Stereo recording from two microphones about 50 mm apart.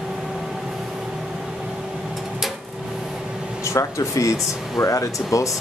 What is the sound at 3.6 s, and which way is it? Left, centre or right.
Speech, left.